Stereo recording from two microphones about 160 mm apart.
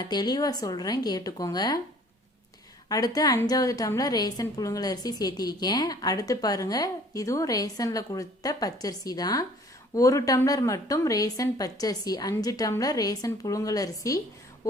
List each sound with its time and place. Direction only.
0.0 s a woman's voice: 25° left (ahead or behind)
2.9 s a woman's voice: 25° left (ahead or behind)